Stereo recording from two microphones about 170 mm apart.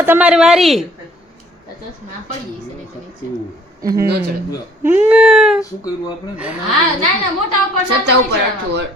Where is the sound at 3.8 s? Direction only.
20° right (ahead or behind).